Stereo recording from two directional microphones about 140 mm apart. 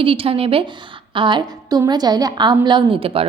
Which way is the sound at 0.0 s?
40° right (ahead or behind).